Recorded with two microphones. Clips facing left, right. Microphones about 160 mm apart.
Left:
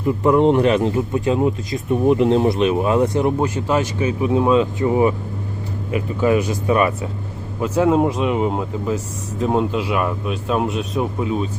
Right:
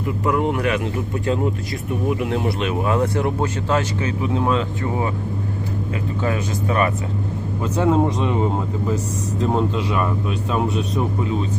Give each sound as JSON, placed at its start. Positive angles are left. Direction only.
{"t": 0.3, "sound": "speech", "side_deg": 30}